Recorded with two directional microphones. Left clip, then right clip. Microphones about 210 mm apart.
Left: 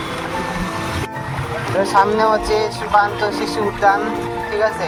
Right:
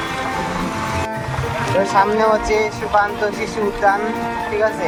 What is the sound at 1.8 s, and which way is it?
Speech, 50° left (ahead or behind).